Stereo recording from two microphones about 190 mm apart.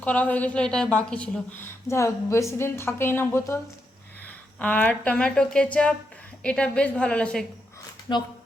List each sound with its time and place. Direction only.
0.0 s a woman's voice: 5° left (ahead or behind)
4.6 s a woman's voice: 10° left (ahead or behind)
8.1 s speech: 25° left (ahead or behind)